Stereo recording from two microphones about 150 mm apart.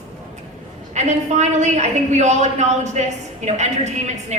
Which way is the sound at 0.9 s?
50° right (ahead or behind).